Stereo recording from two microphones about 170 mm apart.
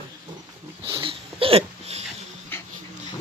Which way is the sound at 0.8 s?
30° right (ahead or behind).